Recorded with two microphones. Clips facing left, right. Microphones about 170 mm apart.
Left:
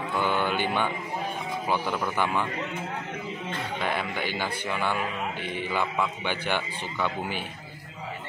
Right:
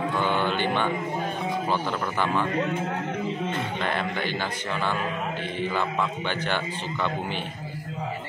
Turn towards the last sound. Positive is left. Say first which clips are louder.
# right 1 dB
turn(degrees=10)  # may be behind; listen again after turning